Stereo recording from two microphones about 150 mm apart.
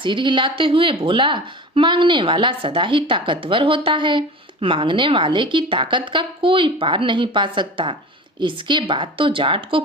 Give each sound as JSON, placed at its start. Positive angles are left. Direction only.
{"t": 0.0, "sound": "speech", "side_deg": -30}